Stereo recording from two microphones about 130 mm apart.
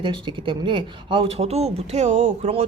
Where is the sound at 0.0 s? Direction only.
40° right (ahead or behind).